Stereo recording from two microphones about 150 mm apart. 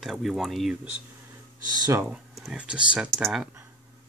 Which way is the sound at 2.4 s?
5° right (ahead or behind).